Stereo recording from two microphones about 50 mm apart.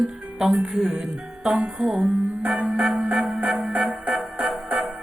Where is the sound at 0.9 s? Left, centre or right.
Centre.